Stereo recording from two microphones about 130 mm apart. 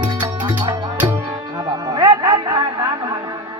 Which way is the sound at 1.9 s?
30° right (ahead or behind).